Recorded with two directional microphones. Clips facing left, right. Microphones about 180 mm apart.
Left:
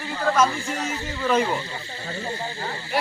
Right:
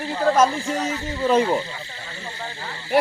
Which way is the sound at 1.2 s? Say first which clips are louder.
Right 3 dB; 30° right (ahead or behind).